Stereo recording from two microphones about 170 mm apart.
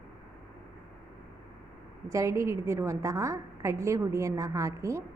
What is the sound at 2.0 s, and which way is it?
A woman's voice, 15° right (ahead or behind).